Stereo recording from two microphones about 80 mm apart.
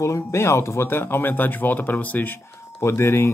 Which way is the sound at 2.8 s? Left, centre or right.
Left.